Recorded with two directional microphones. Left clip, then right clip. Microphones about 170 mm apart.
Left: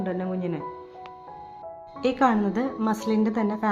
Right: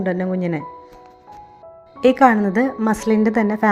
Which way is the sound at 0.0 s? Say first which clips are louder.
Right 7 dB; 30° right (ahead or behind).